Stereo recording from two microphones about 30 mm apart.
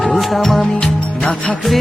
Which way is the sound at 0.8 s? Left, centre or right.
Left.